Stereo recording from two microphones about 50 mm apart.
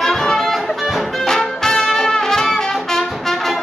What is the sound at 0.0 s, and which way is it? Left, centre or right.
Music, centre.